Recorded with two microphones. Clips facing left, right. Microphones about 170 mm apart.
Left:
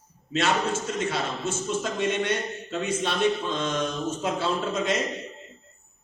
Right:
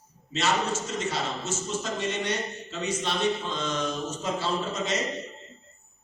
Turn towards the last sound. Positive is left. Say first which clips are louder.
# left 3 dB
turn(degrees=55)  # may be behind; listen again after turning